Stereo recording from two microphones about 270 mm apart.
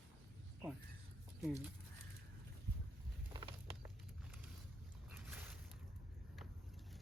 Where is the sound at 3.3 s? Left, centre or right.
Centre.